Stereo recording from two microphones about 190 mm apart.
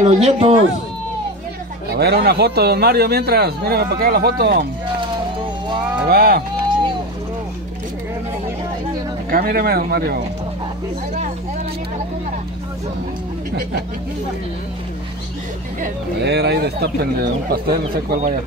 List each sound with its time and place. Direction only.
0.0 s speech: 35° right (ahead or behind)
1.9 s a man's voice: 55° right (ahead or behind)
6.0 s speech: 50° right (ahead or behind)
9.3 s speech: 50° right (ahead or behind)
16.2 s a man's voice: 60° right (ahead or behind)